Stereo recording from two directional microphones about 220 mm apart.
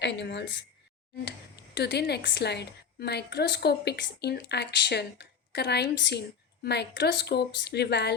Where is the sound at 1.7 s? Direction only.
50° left (ahead or behind).